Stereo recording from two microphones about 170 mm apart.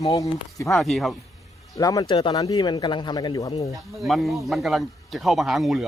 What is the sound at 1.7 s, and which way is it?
Speech, 20° left (ahead or behind).